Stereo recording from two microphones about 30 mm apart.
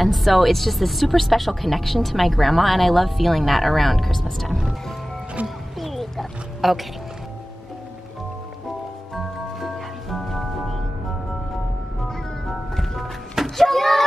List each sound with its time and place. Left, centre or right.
0.0 s speech: centre
5.4 s speech: right
5.8 s a sound: centre
9.1 s music: centre
12.4 s music: centre
13.6 s door: centre